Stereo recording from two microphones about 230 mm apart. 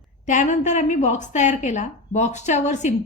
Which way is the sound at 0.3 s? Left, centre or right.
Left.